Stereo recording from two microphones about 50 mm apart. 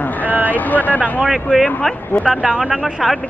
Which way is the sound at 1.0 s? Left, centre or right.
Right.